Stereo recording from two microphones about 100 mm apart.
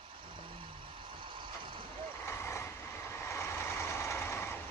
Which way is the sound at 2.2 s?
25° left (ahead or behind).